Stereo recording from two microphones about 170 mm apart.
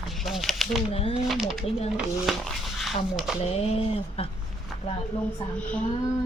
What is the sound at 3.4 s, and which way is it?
Female singing, 35° left (ahead or behind).